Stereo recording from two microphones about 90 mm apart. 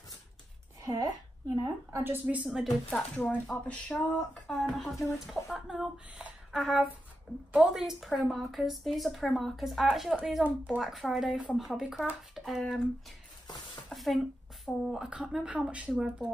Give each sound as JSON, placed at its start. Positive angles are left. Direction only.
{"t": 0.8, "sound": "a woman's voice", "side_deg": -40}
{"t": 2.0, "sound": "a woman's voice", "side_deg": -20}
{"t": 2.4, "sound": "a woman's voice", "side_deg": -5}
{"t": 3.2, "sound": "a woman's voice", "side_deg": 15}
{"t": 10.4, "sound": "a woman's voice", "side_deg": -15}
{"t": 10.8, "sound": "a woman's voice", "side_deg": 0}
{"t": 13.8, "sound": "a sound", "side_deg": 0}
{"t": 14.7, "sound": "a woman's voice", "side_deg": -5}